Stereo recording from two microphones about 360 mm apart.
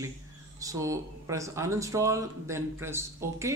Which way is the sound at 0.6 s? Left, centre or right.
Centre.